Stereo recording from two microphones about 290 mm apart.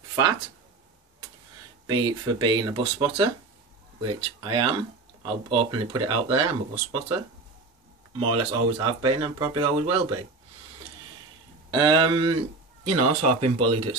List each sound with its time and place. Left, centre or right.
1.9 s speech: centre
8.2 s speech: centre
11.7 s speech: centre
12.8 s speech: right